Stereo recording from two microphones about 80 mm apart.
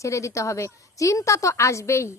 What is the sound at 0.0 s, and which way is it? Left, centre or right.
Speech, left.